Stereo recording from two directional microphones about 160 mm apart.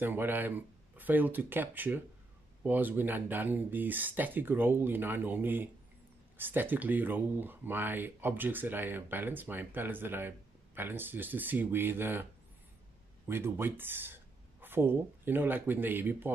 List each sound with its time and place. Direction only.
0.0 s speech: 10° right (ahead or behind)
13.3 s speech: 15° right (ahead or behind)